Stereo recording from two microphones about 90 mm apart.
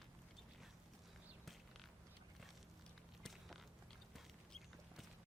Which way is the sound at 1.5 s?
Centre (ahead or behind).